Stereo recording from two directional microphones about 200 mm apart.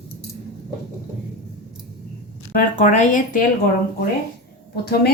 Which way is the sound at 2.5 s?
40° left (ahead or behind).